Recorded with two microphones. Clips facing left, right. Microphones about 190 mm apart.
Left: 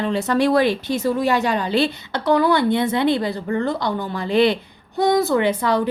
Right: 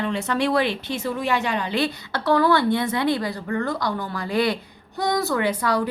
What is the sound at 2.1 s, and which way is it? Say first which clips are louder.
A woman's voice: left 1 dB; 15° left (ahead or behind).